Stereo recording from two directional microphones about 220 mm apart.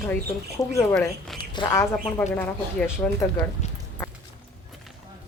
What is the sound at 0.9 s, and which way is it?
Speech, 5° left (ahead or behind).